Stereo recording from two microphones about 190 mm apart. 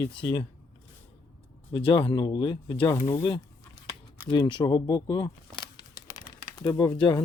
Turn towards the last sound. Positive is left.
turn(degrees=15)  # may be behind; listen again after turning